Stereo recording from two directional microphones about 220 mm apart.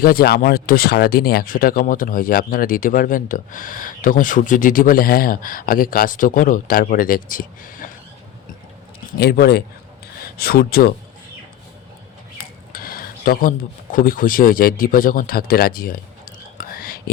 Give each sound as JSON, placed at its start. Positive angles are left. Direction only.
{"t": 0.0, "sound": "speech", "side_deg": 45}
{"t": 9.1, "sound": "speech", "side_deg": 45}
{"t": 12.4, "sound": "a sound", "side_deg": 40}